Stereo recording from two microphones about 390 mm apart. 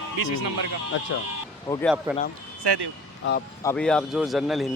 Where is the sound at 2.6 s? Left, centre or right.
Right.